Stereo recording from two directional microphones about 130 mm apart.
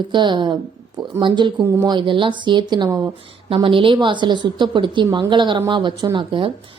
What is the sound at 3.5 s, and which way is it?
A woman's voice, 45° right (ahead or behind).